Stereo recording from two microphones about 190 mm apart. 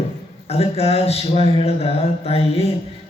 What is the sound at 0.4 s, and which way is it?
Speech, 30° left (ahead or behind).